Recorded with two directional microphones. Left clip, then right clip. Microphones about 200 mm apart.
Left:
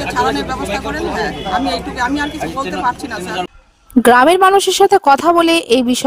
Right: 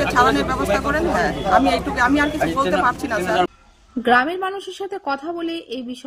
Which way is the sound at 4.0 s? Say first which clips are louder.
Left 9 dB; 55° left (ahead or behind).